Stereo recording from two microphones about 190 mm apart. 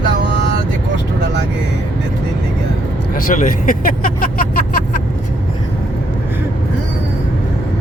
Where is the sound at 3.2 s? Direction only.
45° left (ahead or behind).